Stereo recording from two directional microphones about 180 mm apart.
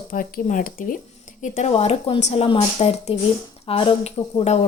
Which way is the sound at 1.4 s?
40° left (ahead or behind).